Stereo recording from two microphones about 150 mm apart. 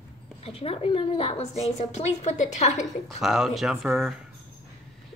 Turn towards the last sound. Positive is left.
turn(degrees=-5)  # may be behind; listen again after turning